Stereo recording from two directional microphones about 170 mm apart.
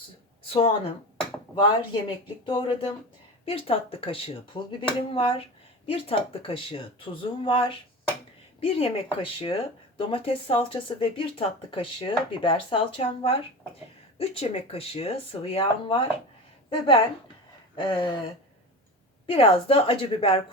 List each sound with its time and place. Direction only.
0.4 s a sound: 35° left (ahead or behind)
1.6 s speech: 30° left (ahead or behind)
19.3 s speech: 35° left (ahead or behind)